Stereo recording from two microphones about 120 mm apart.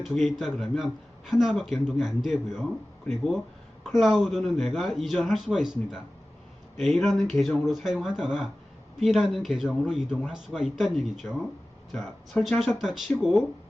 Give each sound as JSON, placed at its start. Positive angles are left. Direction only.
{"t": 0.0, "sound": "a man's voice", "side_deg": 0}